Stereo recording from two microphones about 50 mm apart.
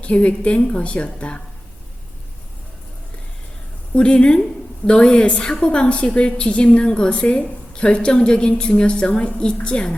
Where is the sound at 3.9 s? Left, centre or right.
Left.